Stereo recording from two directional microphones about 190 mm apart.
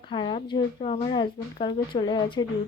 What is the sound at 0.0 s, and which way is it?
A woman's voice, 25° left (ahead or behind).